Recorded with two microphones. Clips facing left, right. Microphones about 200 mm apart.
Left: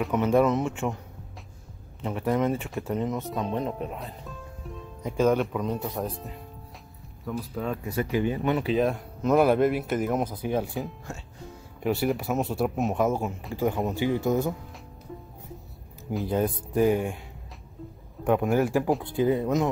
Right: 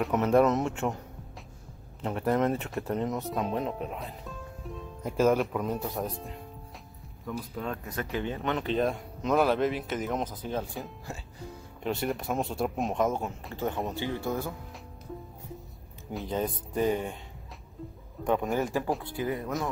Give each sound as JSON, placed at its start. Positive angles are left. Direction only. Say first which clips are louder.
{"t": 0.0, "sound": "speech", "louder": "left 1 dB", "side_deg": 0}
{"t": 2.0, "sound": "speech", "louder": "left 1 dB", "side_deg": 0}
{"t": 10.8, "sound": "speech", "louder": "left 5 dB", "side_deg": 0}
{"t": 13.9, "sound": "speech", "louder": "left 7 dB", "side_deg": 15}
{"t": 16.1, "sound": "speech", "louder": "left 5 dB", "side_deg": 5}
{"t": 18.2, "sound": "speech", "louder": "left 5 dB", "side_deg": 10}
{"t": 19.1, "sound": "speech", "louder": "left 8 dB", "side_deg": 25}